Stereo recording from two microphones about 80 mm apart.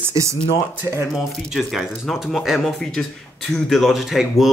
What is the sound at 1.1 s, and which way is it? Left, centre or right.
Speech, centre.